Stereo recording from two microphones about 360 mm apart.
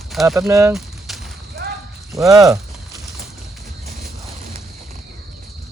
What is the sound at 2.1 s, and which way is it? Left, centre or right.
Speech, centre.